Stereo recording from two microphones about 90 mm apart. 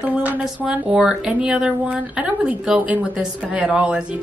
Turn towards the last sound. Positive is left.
turn(degrees=-10)  # may be behind; listen again after turning